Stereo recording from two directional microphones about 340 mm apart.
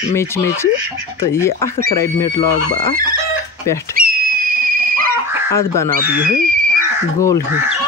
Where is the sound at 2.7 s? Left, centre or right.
Right.